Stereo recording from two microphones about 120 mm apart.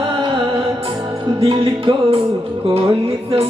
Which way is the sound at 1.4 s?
50° right (ahead or behind).